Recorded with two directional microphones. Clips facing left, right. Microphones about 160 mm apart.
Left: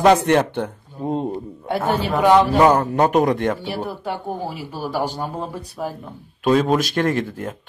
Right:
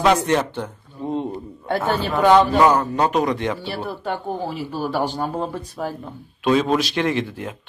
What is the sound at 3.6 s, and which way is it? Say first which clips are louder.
Speech: left 1 dB; 10° left (ahead or behind).